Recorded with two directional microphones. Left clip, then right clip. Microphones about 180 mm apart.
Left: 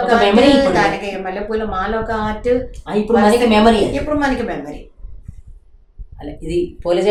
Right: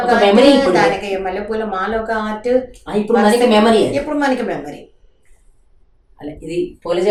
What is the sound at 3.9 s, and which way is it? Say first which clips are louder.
Speech: right 1 dB; 10° right (ahead or behind).